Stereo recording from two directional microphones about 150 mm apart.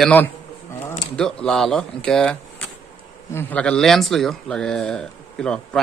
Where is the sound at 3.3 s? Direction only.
10° left (ahead or behind).